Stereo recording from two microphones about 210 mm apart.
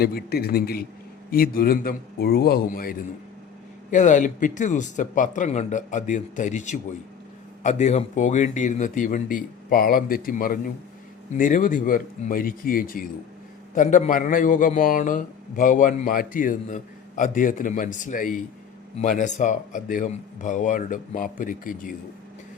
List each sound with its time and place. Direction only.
0.0 s a man's voice: 45° left (ahead or behind)